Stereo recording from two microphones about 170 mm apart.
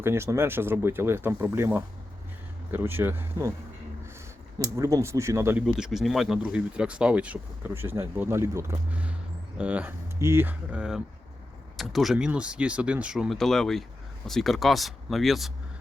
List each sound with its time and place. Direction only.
0.0 s speech: 15° right (ahead or behind)
4.6 s speech: 20° right (ahead or behind)
5.6 s speech: 5° right (ahead or behind)